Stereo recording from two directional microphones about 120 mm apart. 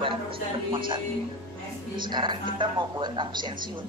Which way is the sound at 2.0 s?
40° right (ahead or behind).